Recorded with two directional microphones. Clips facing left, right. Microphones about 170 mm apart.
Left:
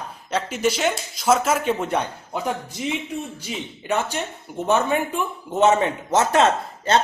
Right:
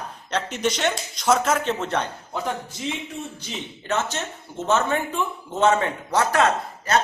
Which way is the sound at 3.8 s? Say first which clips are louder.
Left 2 dB; 15° left (ahead or behind).